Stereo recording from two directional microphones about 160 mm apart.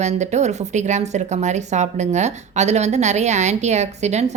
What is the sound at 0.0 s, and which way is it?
Speech, 45° right (ahead or behind).